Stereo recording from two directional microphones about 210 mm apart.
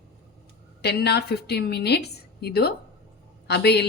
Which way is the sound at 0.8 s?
50° left (ahead or behind).